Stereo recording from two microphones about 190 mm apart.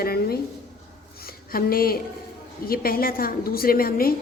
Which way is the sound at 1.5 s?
50° left (ahead or behind).